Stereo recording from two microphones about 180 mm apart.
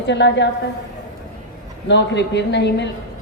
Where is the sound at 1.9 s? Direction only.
75° left (ahead or behind).